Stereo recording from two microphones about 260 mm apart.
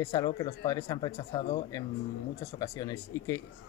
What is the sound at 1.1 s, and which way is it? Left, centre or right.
Speech, left.